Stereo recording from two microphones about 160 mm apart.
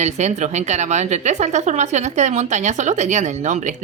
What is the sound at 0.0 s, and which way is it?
A woman's voice, 45° right (ahead or behind).